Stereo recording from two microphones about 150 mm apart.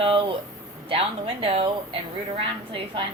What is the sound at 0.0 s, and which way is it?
Speech, 35° right (ahead or behind).